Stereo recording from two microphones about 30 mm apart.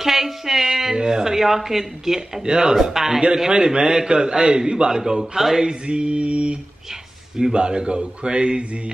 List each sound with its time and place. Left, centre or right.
0.0 s a sound: centre
0.9 s speech: right
2.4 s a man's voice: right
2.8 s a man's voice: centre
5.9 s speech: right
6.9 s a sound: centre
7.5 s speech: right